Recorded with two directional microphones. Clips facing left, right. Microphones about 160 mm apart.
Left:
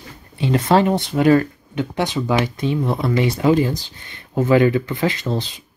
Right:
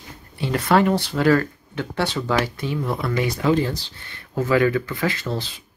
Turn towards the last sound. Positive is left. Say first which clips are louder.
# left 3 dB
turn(degrees=20)  # may be behind; listen again after turning